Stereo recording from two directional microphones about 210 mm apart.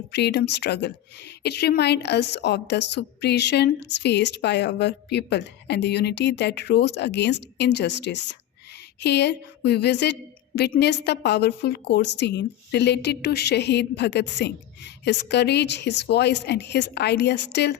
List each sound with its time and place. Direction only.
0.1 s a woman's voice: 55° left (ahead or behind)